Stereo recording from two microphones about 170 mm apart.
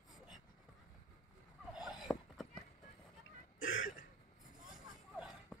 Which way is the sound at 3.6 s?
55° left (ahead or behind).